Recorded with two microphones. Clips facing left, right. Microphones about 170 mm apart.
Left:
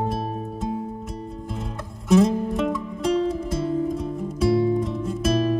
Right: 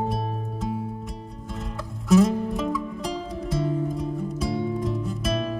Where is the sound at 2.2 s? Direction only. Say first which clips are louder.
Left 2 dB; centre (ahead or behind).